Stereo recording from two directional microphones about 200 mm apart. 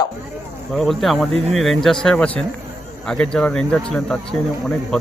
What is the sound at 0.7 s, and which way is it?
Speech, centre (ahead or behind).